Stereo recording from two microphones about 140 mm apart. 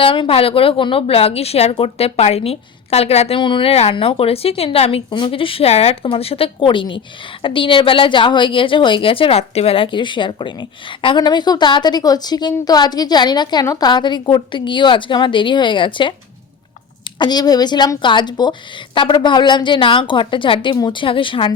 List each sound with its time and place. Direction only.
0.0 s a woman's voice: 40° left (ahead or behind)